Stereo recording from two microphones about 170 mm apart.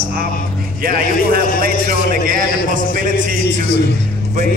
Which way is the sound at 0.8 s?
60° right (ahead or behind).